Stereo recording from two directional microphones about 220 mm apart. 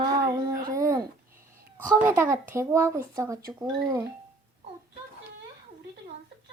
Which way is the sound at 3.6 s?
5° right (ahead or behind).